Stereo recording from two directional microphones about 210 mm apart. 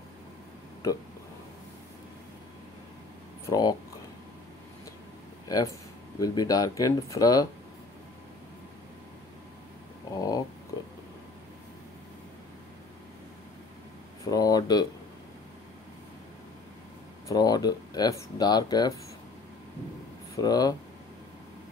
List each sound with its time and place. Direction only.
3.4 s speech: 20° left (ahead or behind)
6.1 s speech: 15° left (ahead or behind)
10.1 s a sound: 15° left (ahead or behind)
14.2 s a sound: 15° left (ahead or behind)
17.3 s speech: 20° left (ahead or behind)
20.3 s speech: 20° left (ahead or behind)